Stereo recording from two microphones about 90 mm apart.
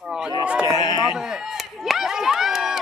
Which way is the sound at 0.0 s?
10° right (ahead or behind).